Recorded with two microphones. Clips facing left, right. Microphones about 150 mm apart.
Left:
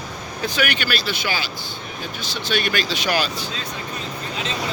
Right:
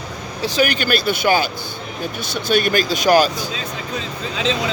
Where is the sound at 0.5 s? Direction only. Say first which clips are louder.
Right 6 dB; 40° right (ahead or behind).